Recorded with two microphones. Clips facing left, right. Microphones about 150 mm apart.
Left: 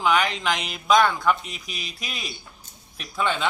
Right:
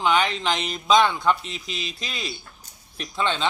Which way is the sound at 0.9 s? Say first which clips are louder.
Even; 25° right (ahead or behind).